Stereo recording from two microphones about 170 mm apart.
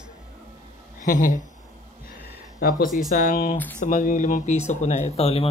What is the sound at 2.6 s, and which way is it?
Speech, 55° left (ahead or behind).